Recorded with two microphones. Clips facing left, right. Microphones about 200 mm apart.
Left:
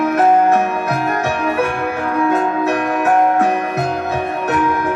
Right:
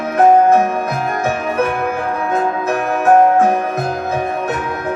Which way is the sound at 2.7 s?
45° right (ahead or behind).